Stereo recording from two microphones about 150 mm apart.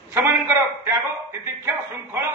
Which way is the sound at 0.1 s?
15° right (ahead or behind).